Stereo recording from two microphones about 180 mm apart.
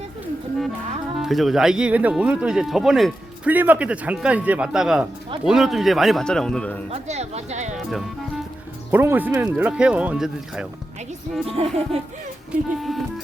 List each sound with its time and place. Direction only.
1.2 s speech: centre (ahead or behind)
6.9 s speech: 40° right (ahead or behind)
8.9 s speech: 10° right (ahead or behind)
11.4 s speech: 35° right (ahead or behind)
12.5 s speech: centre (ahead or behind)